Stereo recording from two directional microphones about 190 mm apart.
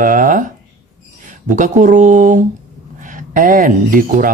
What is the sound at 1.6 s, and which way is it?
A woman's voice, 40° right (ahead or behind).